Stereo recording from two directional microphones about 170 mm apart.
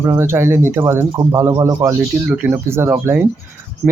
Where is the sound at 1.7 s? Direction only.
5° right (ahead or behind).